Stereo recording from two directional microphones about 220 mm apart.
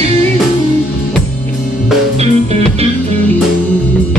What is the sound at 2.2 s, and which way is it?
Music, 30° right (ahead or behind).